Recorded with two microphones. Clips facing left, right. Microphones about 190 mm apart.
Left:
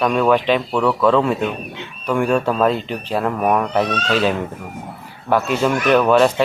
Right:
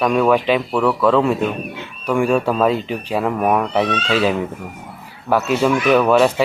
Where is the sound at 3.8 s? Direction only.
45° left (ahead or behind).